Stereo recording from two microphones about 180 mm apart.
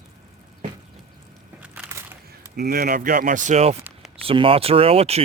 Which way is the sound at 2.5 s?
60° right (ahead or behind).